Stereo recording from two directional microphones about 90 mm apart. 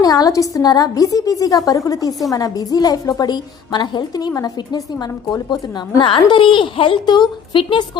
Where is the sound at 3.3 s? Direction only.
55° left (ahead or behind).